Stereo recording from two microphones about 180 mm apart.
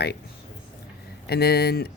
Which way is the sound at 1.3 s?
60° left (ahead or behind).